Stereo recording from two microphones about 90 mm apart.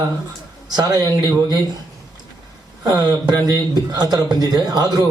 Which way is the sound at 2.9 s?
45° right (ahead or behind).